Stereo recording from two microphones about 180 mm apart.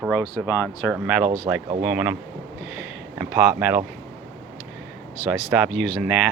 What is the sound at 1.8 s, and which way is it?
Speech, 10° right (ahead or behind).